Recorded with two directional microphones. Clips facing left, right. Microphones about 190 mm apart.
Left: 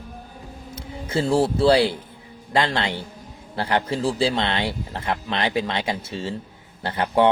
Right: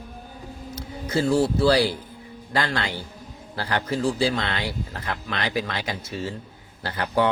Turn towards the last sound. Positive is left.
turn(degrees=25)  # may be behind; listen again after turning